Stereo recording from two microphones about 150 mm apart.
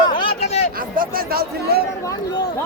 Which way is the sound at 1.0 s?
85° right.